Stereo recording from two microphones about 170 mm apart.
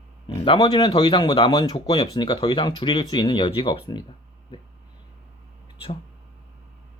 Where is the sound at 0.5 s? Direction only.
25° left (ahead or behind).